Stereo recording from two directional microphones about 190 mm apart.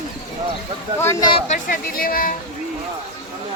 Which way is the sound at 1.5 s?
45° left (ahead or behind).